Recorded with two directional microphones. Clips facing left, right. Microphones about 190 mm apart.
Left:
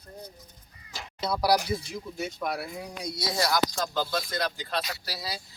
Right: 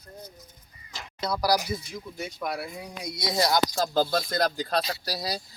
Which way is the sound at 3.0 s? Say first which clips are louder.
Right 3 dB; 20° right (ahead or behind).